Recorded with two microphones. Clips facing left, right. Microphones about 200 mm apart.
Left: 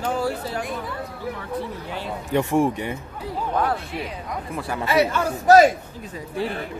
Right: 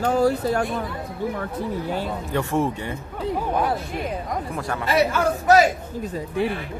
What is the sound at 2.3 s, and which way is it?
Speech, 15° left (ahead or behind).